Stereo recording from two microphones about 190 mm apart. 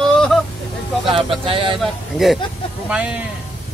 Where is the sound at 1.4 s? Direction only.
30° right (ahead or behind).